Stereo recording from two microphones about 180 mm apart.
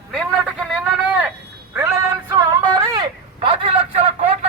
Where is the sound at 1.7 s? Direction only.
15° right (ahead or behind).